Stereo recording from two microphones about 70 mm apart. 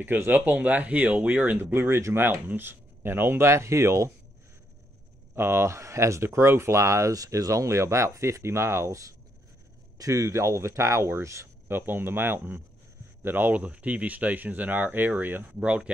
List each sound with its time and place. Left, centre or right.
0.0 s speech: right
2.4 s speech: right
5.3 s speech: right; by 15.9 s centre